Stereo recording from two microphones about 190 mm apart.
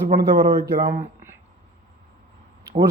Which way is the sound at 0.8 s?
40° right (ahead or behind).